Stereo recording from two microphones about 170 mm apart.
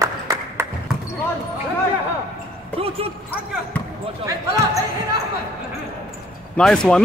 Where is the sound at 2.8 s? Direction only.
35° right (ahead or behind).